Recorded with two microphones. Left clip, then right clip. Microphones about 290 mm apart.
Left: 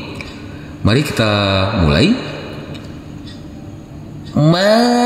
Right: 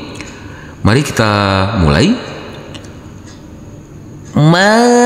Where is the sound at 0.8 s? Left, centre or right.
Right.